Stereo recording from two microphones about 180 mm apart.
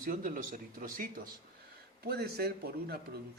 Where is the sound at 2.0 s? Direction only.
60° right (ahead or behind).